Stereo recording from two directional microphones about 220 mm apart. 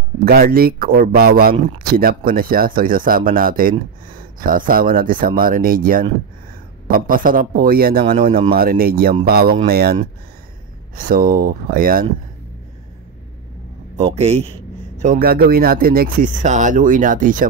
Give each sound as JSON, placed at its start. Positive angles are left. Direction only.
{"t": 0.2, "sound": "speech", "side_deg": -45}
{"t": 11.0, "sound": "speech", "side_deg": -40}
{"t": 14.1, "sound": "a man's voice", "side_deg": -30}